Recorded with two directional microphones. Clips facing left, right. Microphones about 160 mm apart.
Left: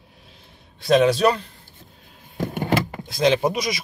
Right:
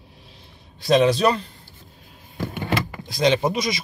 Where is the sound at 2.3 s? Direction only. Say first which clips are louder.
Left 3 dB; 45° left (ahead or behind).